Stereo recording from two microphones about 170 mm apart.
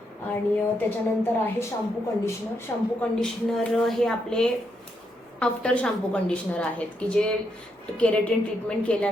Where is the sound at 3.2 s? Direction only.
5° left (ahead or behind).